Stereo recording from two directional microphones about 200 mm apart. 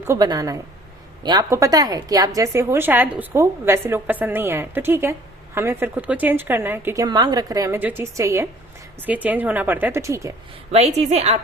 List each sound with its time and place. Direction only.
0.1 s a woman's voice: 20° right (ahead or behind)
10.7 s a woman's voice: 35° right (ahead or behind)